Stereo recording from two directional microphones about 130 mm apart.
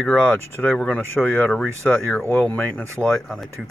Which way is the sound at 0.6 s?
5° left (ahead or behind).